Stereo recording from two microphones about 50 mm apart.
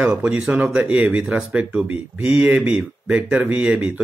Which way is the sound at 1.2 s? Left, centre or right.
Centre.